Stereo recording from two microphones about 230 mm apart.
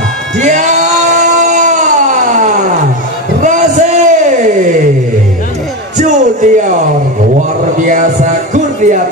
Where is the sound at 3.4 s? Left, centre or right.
Right.